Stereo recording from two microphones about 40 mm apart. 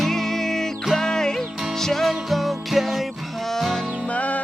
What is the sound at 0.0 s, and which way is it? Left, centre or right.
Music, centre.